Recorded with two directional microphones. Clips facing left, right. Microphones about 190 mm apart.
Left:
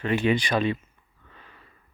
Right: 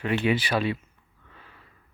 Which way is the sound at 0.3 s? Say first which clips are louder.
Left 2 dB; 5° right (ahead or behind).